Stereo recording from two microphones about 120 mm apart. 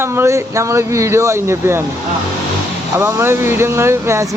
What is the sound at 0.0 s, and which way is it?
Speech, 20° right (ahead or behind).